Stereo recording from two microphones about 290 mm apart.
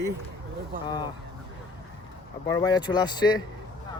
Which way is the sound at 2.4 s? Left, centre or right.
Centre.